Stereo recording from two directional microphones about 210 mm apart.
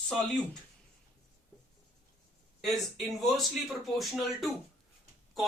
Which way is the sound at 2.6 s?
Centre (ahead or behind).